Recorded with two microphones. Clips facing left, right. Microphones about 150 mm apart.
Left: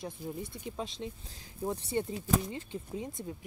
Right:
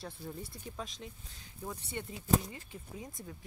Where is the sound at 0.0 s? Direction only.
15° left (ahead or behind).